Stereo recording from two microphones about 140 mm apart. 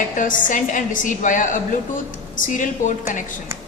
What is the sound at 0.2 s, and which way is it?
A woman's voice, 70° left (ahead or behind).